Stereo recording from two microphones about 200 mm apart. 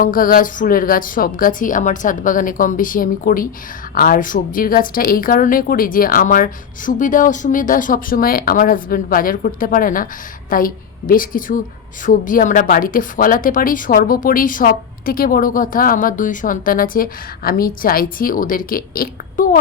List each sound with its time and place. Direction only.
0.0 s a woman's voice: 45° left (ahead or behind)